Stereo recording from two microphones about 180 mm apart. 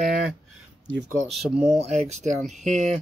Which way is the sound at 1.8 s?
40° right (ahead or behind).